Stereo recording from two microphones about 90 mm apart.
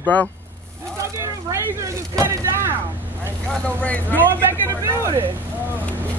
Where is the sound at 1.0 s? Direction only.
30° right (ahead or behind).